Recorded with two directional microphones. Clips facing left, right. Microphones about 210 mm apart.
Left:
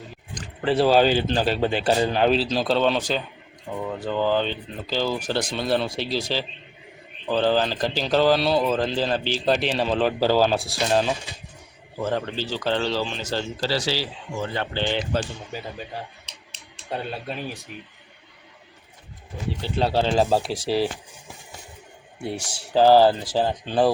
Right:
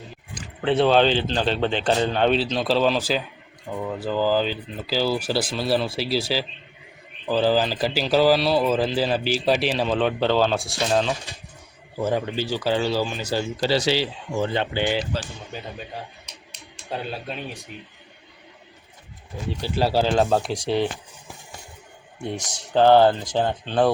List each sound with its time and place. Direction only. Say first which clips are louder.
0.3 s speech: right 1 dB; centre (ahead or behind)
11.9 s speech: right 2 dB; 10° right (ahead or behind)
15.1 s speech: left 4 dB; 55° left (ahead or behind)
16.9 s speech: even; centre (ahead or behind)
19.6 s speech: right 1 dB; 5° right (ahead or behind)
22.2 s speech: even; 5° left (ahead or behind)